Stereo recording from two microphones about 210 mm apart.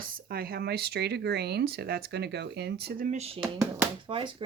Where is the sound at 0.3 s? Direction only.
50° right (ahead or behind).